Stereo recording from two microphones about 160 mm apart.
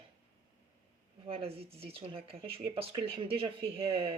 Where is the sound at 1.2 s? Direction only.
35° right (ahead or behind).